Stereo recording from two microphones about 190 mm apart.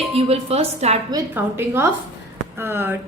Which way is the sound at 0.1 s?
30° right (ahead or behind).